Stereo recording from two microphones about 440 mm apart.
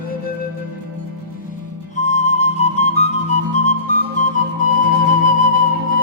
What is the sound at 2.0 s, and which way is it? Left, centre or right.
Music, centre.